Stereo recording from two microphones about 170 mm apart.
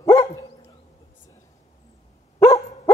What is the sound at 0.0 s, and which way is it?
Dog, 20° left (ahead or behind).